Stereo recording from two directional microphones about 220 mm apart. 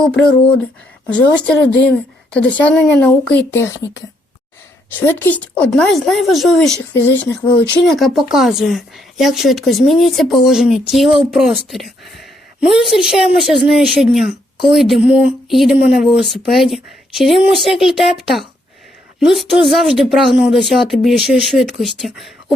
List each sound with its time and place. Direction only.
0.0 s a woman's voice: 5° left (ahead or behind)
1.6 s speech: 50° left (ahead or behind)
2.3 s a woman's voice: 5° left (ahead or behind)
4.9 s a woman's voice: 10° left (ahead or behind)
7.9 s a woman's voice: centre (ahead or behind)